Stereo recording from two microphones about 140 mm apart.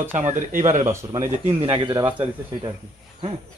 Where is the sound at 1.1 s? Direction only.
30° right (ahead or behind).